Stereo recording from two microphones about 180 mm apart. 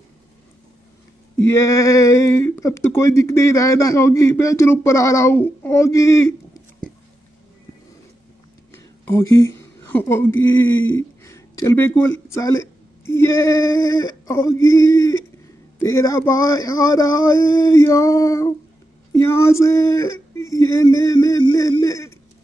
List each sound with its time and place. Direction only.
1.4 s speech: 15° left (ahead or behind)
8.7 s speech: 15° left (ahead or behind)
10.9 s a sound: 15° left (ahead or behind)
12.3 s speech: 15° left (ahead or behind)